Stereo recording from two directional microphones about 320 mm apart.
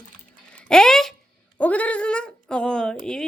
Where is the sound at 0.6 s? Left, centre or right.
Centre.